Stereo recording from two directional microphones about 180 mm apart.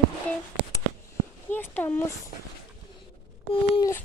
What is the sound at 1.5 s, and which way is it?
Speech, 10° left (ahead or behind).